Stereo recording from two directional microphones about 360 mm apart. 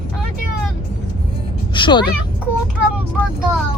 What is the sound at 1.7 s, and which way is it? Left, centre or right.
Speech, centre.